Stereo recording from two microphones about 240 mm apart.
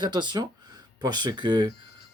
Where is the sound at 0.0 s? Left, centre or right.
Centre.